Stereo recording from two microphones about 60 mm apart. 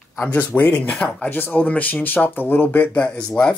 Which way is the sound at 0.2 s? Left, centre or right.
Left.